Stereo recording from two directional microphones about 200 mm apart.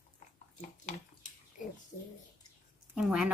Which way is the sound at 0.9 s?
40° left (ahead or behind).